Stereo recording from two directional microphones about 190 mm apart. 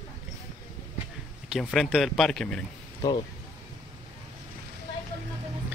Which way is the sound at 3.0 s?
20° left (ahead or behind).